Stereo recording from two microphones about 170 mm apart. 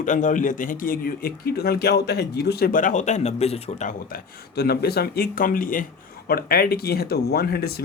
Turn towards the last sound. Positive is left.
turn(degrees=70)  # may be behind; listen again after turning